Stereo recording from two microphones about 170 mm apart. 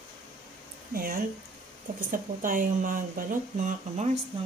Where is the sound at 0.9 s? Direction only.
55° right (ahead or behind); by 4.2 s 40° right (ahead or behind).